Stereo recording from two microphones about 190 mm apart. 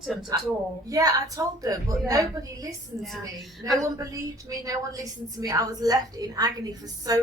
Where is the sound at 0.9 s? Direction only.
20° right (ahead or behind).